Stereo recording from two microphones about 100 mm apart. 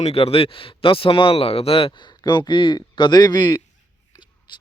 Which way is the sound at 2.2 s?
50° left (ahead or behind).